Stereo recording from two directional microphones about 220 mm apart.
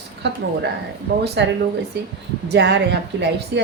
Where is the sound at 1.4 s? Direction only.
50° right (ahead or behind).